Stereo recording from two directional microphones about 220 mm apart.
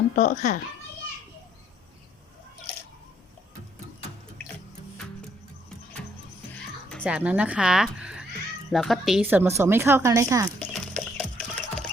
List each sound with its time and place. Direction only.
0.2 s a child's voice: 35° left (ahead or behind)
7.0 s a woman's voice: 5° right (ahead or behind)
10.6 s music: 5° left (ahead or behind)